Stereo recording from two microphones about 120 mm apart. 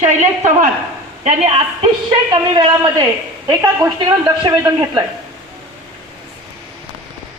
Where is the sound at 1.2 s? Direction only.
60° right (ahead or behind).